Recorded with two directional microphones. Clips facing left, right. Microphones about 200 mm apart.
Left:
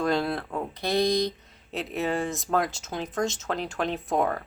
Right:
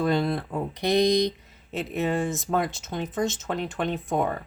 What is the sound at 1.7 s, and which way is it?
Speech, centre (ahead or behind).